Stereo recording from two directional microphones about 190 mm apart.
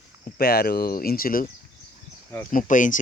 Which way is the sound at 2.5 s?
45° left (ahead or behind).